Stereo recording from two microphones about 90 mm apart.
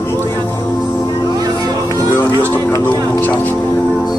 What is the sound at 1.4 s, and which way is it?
Vehicle, 45° right (ahead or behind).